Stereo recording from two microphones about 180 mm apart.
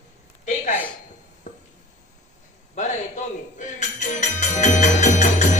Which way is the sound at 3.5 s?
40° left (ahead or behind).